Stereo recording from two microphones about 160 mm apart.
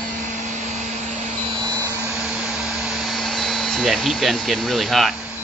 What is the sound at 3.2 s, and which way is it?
Speech, centre (ahead or behind).